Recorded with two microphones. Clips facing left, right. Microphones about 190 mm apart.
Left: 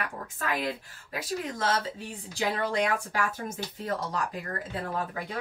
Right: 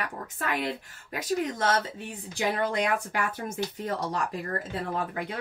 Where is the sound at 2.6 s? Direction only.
20° right (ahead or behind).